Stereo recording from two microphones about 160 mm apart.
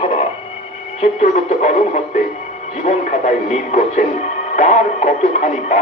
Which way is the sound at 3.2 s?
45° left (ahead or behind).